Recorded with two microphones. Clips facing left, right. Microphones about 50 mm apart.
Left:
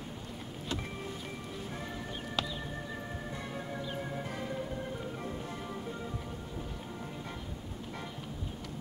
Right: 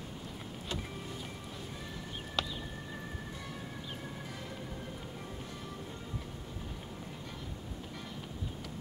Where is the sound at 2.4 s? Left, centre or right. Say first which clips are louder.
Even; centre.